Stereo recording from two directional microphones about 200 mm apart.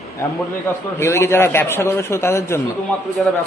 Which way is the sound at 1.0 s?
15° left (ahead or behind).